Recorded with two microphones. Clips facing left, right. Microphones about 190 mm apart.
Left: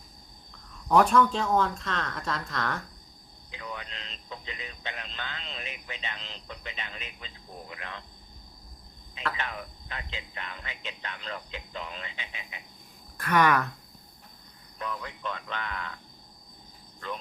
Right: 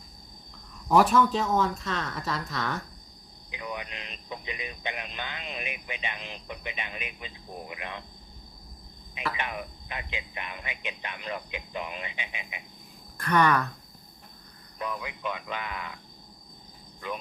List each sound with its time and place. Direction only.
0.9 s speech: 5° right (ahead or behind)
3.5 s speech: 15° right (ahead or behind)
9.1 s speech: 15° right (ahead or behind)
13.1 s speech: 5° left (ahead or behind)
14.8 s speech: 10° right (ahead or behind)
17.0 s speech: 10° right (ahead or behind)